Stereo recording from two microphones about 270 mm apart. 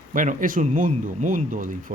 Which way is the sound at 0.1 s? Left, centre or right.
Right.